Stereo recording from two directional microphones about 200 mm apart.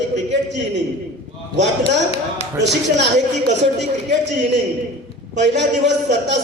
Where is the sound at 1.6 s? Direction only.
60° right (ahead or behind).